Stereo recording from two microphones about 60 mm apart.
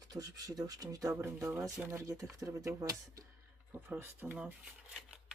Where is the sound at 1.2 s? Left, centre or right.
Right.